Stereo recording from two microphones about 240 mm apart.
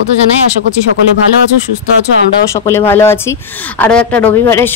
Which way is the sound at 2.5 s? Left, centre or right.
Centre.